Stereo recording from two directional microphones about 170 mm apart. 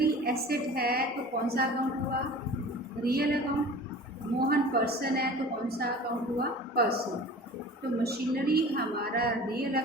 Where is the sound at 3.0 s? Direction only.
65° right (ahead or behind).